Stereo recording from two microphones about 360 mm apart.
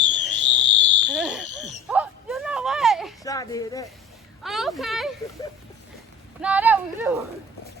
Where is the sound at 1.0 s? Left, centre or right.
Centre.